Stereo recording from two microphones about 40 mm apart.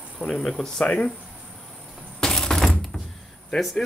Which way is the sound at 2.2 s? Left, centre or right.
Centre.